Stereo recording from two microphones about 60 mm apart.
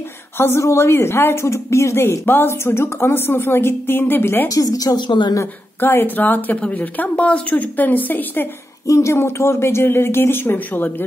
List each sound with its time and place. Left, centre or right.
0.6 s speech: left
4.5 s a woman's voice: left
5.4 s speech: left
8.8 s speech: left